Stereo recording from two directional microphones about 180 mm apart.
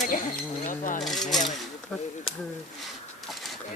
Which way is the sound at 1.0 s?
Centre (ahead or behind).